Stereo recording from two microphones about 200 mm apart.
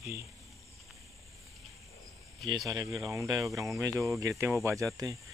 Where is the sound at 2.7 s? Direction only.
15° right (ahead or behind).